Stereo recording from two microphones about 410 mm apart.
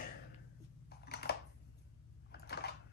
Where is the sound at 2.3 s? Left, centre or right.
Left.